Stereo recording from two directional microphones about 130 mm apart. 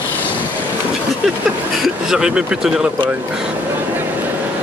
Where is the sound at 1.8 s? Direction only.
5° right (ahead or behind).